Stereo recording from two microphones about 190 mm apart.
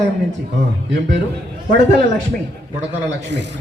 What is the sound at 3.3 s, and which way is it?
Speech, 70° right (ahead or behind).